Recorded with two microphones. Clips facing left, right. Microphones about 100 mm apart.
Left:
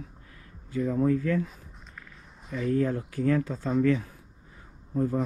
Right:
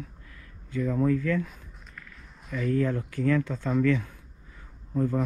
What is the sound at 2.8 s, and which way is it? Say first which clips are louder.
Speech: even; 55° right (ahead or behind).